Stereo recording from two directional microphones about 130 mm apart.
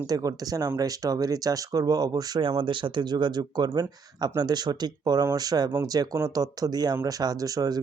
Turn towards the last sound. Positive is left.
turn(degrees=-30)  # may be behind; listen again after turning